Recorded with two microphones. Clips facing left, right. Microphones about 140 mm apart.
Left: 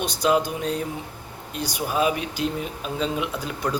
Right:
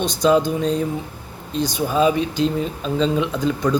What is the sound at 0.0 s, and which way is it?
Speech, 10° left (ahead or behind).